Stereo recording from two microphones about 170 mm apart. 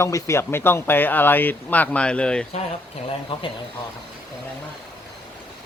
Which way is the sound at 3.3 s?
30° left (ahead or behind).